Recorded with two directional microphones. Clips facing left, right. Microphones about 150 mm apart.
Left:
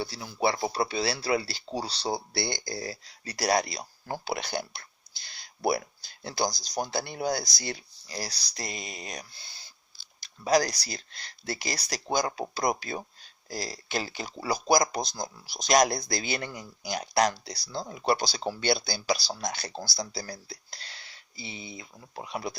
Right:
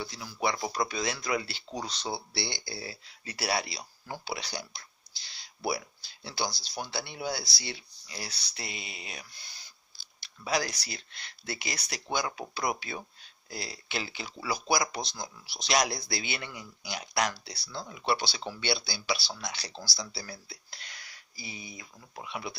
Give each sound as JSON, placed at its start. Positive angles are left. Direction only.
{"t": 0.0, "sound": "speech", "side_deg": 30}
{"t": 9.3, "sound": "owl", "side_deg": 30}
{"t": 10.2, "sound": "speech", "side_deg": 40}